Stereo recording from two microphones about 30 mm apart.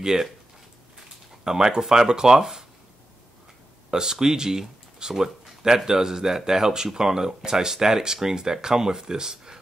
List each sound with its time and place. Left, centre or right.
0.0 s speech: centre
1.4 s speech: centre
3.9 s speech: centre